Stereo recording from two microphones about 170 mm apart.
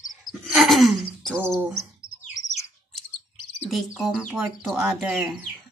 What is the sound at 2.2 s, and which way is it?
Bird, 45° left (ahead or behind).